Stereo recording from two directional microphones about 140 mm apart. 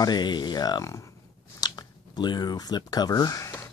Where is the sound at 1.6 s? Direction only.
30° left (ahead or behind).